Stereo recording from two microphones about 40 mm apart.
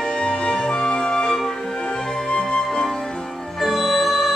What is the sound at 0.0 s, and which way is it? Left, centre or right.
Music, centre.